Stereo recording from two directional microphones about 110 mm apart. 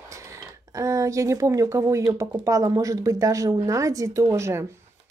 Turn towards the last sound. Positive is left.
turn(degrees=-25)  # may be behind; listen again after turning